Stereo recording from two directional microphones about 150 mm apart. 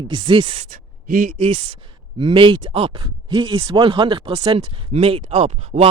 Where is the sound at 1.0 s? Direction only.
70° right (ahead or behind).